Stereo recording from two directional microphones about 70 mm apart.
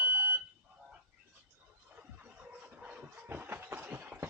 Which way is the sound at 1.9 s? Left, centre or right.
Right.